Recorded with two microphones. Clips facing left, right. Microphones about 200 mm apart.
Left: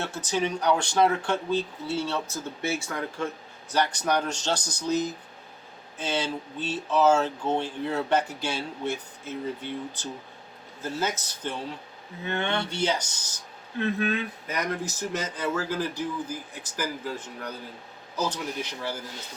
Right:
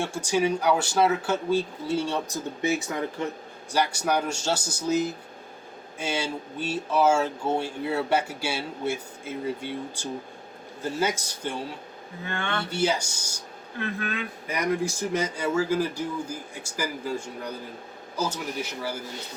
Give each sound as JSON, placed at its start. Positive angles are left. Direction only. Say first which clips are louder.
{"t": 0.0, "sound": "speech", "louder": "right 3 dB", "side_deg": -10}
{"t": 12.2, "sound": "speech", "louder": "left 3 dB", "side_deg": 20}
{"t": 12.7, "sound": "speech", "louder": "right 2 dB", "side_deg": -10}
{"t": 13.7, "sound": "speech", "louder": "left 5 dB", "side_deg": 20}
{"t": 14.4, "sound": "speech", "louder": "right 4 dB", "side_deg": -10}